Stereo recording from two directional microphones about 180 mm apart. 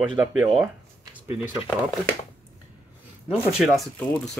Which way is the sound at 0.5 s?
10° right (ahead or behind).